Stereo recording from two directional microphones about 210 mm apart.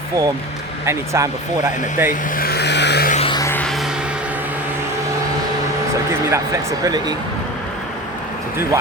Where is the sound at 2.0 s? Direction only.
40° left (ahead or behind).